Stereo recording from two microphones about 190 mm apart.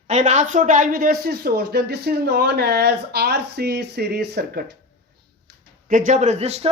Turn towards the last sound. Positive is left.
turn(degrees=-35)  # may be behind; listen again after turning